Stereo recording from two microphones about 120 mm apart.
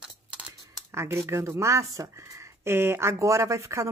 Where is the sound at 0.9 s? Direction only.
20° right (ahead or behind).